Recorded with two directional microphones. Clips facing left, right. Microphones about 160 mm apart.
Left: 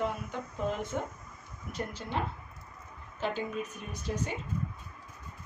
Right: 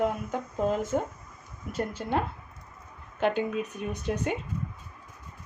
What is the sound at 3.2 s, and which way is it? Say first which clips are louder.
Speech: right 7 dB; 60° right (ahead or behind).